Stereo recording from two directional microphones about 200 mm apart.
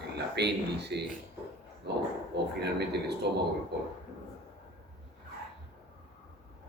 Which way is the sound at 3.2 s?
55° right (ahead or behind).